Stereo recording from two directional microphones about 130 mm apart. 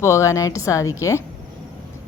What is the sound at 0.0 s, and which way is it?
A woman's voice, 20° left (ahead or behind).